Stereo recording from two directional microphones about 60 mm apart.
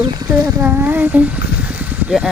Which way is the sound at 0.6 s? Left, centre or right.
Right.